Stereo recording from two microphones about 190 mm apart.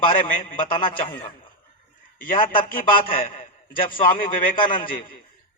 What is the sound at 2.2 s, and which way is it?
A man's voice, 45° left (ahead or behind).